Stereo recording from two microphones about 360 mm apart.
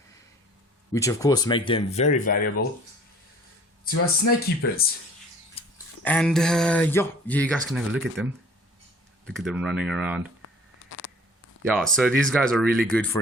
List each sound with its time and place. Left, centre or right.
0.9 s speech: centre
3.8 s speech: left
5.6 s a sound: centre
6.0 s speech: centre
9.2 s speech: centre
10.4 s a sound: left
11.6 s speech: centre